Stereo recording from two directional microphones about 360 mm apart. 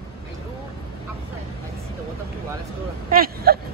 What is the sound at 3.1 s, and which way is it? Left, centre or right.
Vehicle, right.